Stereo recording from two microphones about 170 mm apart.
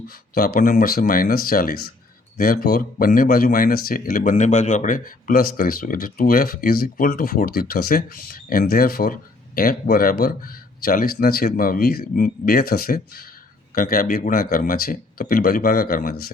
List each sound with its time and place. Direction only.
0.3 s speech: 55° left (ahead or behind)